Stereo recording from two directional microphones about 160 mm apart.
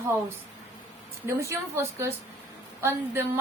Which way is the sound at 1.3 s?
15° right (ahead or behind).